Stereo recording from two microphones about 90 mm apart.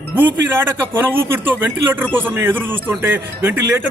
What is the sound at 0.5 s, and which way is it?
Speech, 25° right (ahead or behind).